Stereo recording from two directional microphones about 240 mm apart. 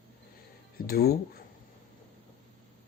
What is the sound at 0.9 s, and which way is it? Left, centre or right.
Speech, left.